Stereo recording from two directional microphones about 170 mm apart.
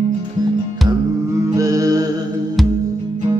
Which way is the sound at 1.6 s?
20° right (ahead or behind).